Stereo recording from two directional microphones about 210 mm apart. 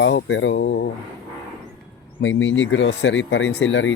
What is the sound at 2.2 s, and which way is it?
Speech, 60° left (ahead or behind).